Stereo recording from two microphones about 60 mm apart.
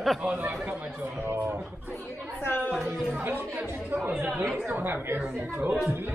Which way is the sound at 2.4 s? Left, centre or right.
Left.